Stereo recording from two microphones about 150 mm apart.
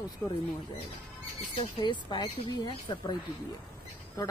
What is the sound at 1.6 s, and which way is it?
Speech, 35° left (ahead or behind).